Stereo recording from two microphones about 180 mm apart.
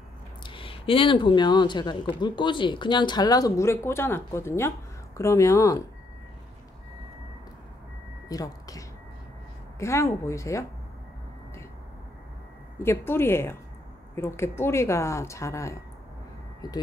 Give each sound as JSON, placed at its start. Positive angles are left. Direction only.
{"t": 0.4, "sound": "speech", "side_deg": 30}
{"t": 8.3, "sound": "speech", "side_deg": 20}
{"t": 12.7, "sound": "speech", "side_deg": 15}